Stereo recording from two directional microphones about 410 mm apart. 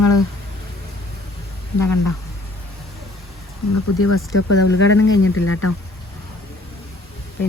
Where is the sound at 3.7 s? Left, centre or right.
Left.